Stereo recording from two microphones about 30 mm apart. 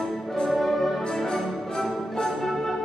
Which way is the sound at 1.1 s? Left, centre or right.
Centre.